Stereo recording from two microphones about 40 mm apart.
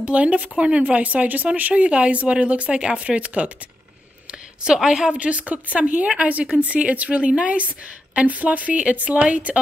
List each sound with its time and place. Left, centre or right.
0.0 s a woman's voice: right
4.8 s a woman's voice: centre
5.2 s a woman's voice: right